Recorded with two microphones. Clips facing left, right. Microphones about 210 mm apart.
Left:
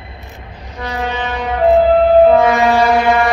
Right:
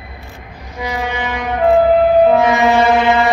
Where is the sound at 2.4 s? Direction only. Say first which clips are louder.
Left 1 dB; 20° right (ahead or behind).